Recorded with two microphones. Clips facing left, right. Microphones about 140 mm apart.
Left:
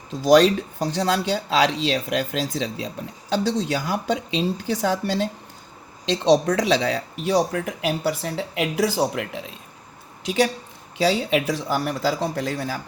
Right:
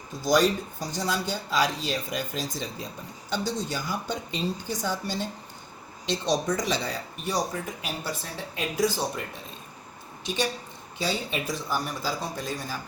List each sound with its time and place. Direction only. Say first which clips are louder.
0.1 s speech: left 7 dB; 75° left (ahead or behind)